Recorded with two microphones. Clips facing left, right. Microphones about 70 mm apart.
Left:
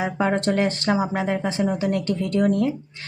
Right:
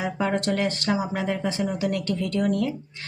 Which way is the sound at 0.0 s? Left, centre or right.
Left.